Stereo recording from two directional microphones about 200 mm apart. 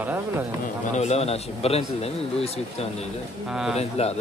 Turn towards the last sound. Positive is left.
turn(degrees=30)  # may be behind; listen again after turning